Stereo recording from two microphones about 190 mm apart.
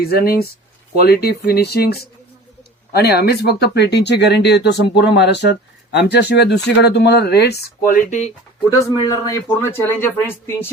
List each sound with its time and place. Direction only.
0.0 s speech: 55° left (ahead or behind)
7.9 s speech: 40° left (ahead or behind)
8.8 s speech: 20° left (ahead or behind)